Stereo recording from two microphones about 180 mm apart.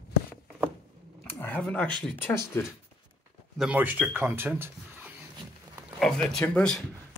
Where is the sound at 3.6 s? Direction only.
10° right (ahead or behind).